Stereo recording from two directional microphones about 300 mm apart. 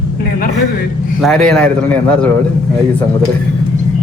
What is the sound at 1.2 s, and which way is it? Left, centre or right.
A man's voice, centre.